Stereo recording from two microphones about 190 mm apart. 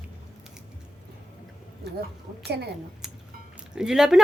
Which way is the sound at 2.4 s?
60° right (ahead or behind).